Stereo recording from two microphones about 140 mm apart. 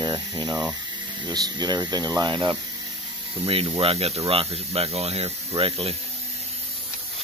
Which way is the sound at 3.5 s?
40° right (ahead or behind).